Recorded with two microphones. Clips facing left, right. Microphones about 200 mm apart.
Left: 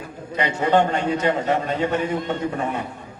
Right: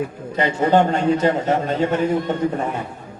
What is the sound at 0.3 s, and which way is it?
A man's voice, 40° right (ahead or behind).